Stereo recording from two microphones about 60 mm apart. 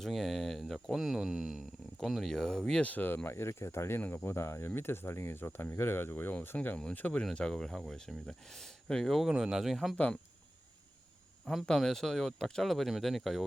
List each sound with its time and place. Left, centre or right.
0.0 s speech: centre
2.8 s speech: left
3.2 s speech: left
6.5 s speech: left
7.3 s speech: centre
11.5 s speech: centre